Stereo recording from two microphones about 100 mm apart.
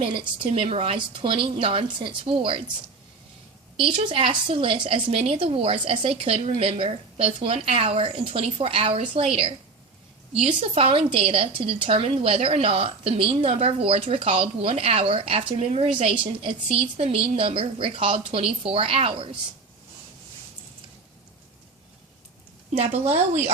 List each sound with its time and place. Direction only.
0.0 s a woman's voice: 65° right (ahead or behind); by 0.9 s 80° right
0.9 s a woman's voice: 60° right (ahead or behind)
3.8 s a woman's voice: 55° right (ahead or behind)
5.1 s a woman's voice: 75° right (ahead or behind)
22.7 s a woman's voice: 90° right